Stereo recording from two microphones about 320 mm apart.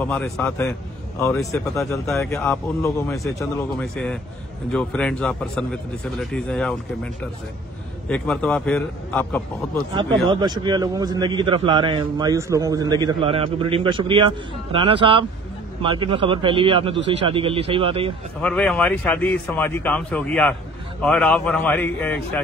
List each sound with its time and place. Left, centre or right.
0.0 s speech: centre
8.1 s speech: centre
10.2 s a man's voice: centre
18.4 s speech: centre